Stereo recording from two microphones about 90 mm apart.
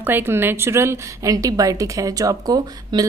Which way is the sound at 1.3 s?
40° right (ahead or behind).